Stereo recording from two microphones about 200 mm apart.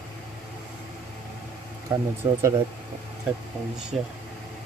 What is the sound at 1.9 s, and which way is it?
Speech, 15° right (ahead or behind).